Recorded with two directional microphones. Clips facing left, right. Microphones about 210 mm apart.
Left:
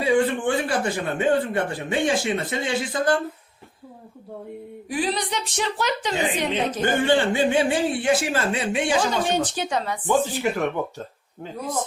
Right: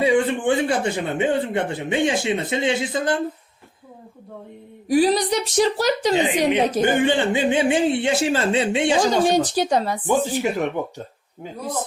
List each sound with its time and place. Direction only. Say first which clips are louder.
0.0 s speech: right 2 dB; 20° right (ahead or behind)
4.9 s a woman's voice: right 8 dB; 40° right (ahead or behind)
6.8 s speech: left 3 dB; 15° right (ahead or behind)
9.0 s a woman's voice: right 5 dB; 35° right (ahead or behind)
10.1 s speech: even; 15° right (ahead or behind)